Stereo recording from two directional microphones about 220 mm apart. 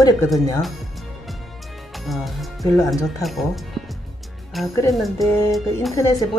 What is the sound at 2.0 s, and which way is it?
Speech, centre (ahead or behind).